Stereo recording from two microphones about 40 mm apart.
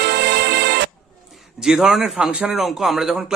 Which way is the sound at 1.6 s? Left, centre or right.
Centre.